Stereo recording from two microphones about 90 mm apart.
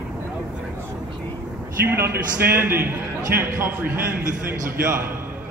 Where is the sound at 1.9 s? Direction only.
25° right (ahead or behind).